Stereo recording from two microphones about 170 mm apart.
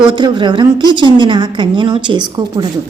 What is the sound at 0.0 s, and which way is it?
A woman's voice, 30° right (ahead or behind).